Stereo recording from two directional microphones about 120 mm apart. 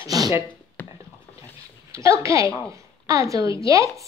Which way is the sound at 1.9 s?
25° right (ahead or behind).